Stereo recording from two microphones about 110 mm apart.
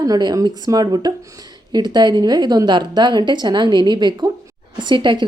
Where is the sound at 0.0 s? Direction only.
35° right (ahead or behind).